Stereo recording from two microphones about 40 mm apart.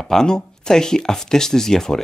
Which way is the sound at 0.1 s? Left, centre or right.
Centre.